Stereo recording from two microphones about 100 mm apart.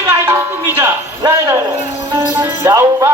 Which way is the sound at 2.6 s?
25° right (ahead or behind).